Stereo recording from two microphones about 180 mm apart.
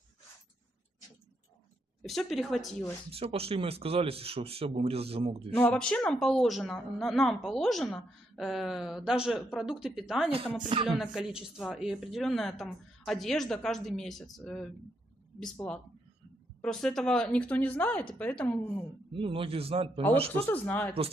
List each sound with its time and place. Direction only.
2.0 s a woman's voice: centre (ahead or behind)
3.1 s speech: 30° right (ahead or behind)
5.5 s a woman's voice: 5° left (ahead or behind)
19.1 s speech: 30° right (ahead or behind)
20.3 s speech: 10° left (ahead or behind)